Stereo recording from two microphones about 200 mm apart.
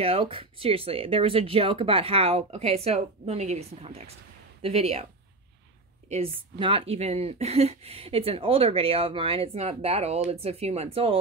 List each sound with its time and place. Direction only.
0.0 s speech: 25° right (ahead or behind)
6.0 s speech: 30° right (ahead or behind)